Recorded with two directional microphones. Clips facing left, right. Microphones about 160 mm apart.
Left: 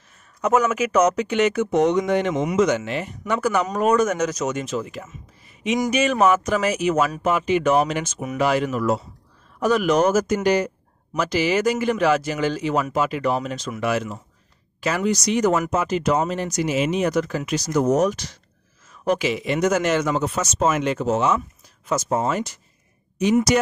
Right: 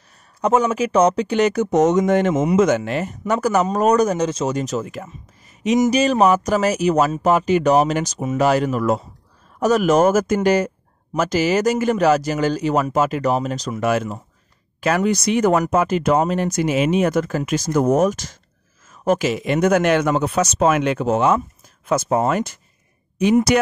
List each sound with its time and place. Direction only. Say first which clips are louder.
0.4 s speech: right 2 dB; 30° right (ahead or behind); by 22.6 s 55° right (ahead or behind)